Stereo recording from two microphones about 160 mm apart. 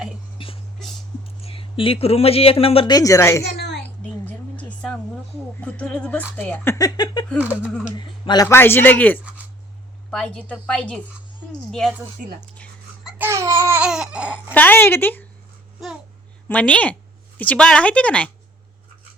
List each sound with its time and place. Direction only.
0.3 s music: 35° left (ahead or behind)
1.4 s speech: 35° left (ahead or behind)
2.9 s speech: 20° left (ahead or behind)
3.8 s a sound: 10° left (ahead or behind)
5.5 s speech: 10° left (ahead or behind); by 7.3 s 25° left (ahead or behind)
7.5 s speech: 5° left (ahead or behind)
7.9 s a man's voice: 30° left (ahead or behind)
8.4 s a woman's voice: 15° left (ahead or behind)
13.1 s babbling: 15° right (ahead or behind)
14.5 s speech: 10° left (ahead or behind)
16.5 s speech: 10° left (ahead or behind)